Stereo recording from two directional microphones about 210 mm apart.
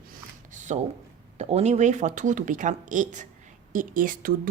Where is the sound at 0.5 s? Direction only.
35° right (ahead or behind).